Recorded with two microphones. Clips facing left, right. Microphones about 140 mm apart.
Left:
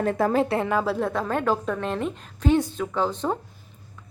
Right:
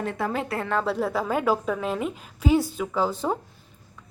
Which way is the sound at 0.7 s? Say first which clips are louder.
Left 1 dB; 5° left (ahead or behind).